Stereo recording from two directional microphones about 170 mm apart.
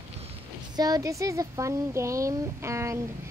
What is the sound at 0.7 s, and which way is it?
Speech, 20° right (ahead or behind).